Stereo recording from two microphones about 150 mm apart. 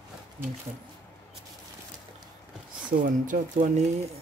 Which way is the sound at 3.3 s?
60° right (ahead or behind).